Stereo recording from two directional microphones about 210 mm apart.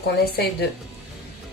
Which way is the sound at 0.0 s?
50° left (ahead or behind).